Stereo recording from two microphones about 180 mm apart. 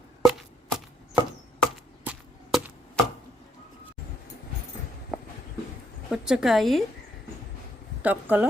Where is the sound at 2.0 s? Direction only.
10° right (ahead or behind).